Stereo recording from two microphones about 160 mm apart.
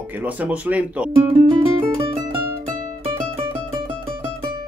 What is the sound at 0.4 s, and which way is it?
Speech, 10° right (ahead or behind).